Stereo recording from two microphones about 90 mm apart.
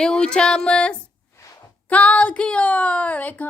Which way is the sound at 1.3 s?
35° left (ahead or behind).